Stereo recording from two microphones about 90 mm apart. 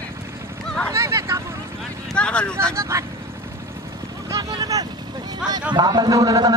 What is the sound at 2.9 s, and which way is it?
Speech, 30° right (ahead or behind).